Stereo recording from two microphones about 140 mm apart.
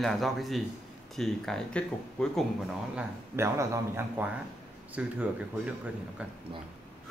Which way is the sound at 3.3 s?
20° right (ahead or behind).